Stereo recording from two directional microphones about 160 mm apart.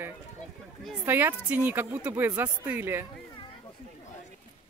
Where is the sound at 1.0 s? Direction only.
15° right (ahead or behind).